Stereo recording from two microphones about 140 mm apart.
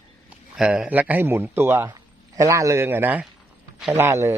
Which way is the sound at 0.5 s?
5° right (ahead or behind).